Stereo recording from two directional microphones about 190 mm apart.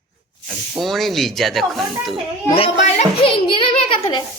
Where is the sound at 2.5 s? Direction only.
30° left (ahead or behind).